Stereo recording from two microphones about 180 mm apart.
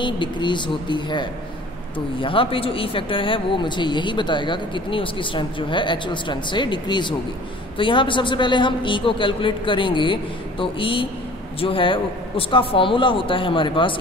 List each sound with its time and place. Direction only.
0.0 s speech: 25° left (ahead or behind)